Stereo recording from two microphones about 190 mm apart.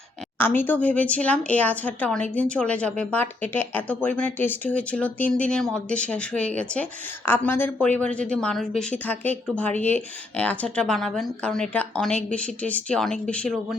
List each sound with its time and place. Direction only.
0.3 s speech: 10° left (ahead or behind)